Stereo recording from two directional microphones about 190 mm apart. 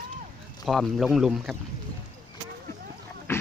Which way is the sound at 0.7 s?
Centre (ahead or behind).